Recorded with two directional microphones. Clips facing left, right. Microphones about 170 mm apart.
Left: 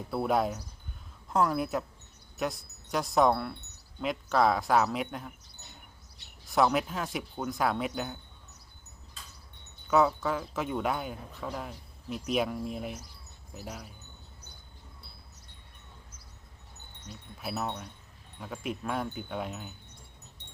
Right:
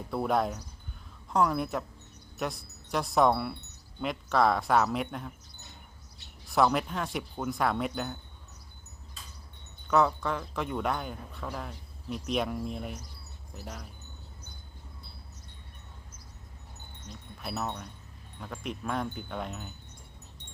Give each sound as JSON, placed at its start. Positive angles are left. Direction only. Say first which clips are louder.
{"t": 0.1, "sound": "speech", "louder": "even", "side_deg": 0}
{"t": 6.5, "sound": "speech", "louder": "even", "side_deg": 0}
{"t": 9.9, "sound": "speech", "louder": "left 1 dB", "side_deg": 5}
{"t": 17.1, "sound": "speech", "louder": "left 1 dB", "side_deg": 5}